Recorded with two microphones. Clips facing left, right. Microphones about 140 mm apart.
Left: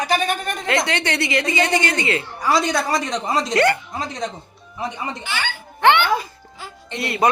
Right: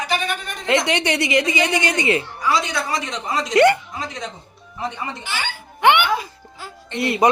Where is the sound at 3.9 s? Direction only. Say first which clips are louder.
Left 3 dB; 35° left (ahead or behind).